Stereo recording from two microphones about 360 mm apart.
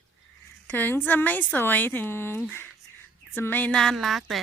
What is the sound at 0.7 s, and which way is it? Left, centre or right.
Speech, centre.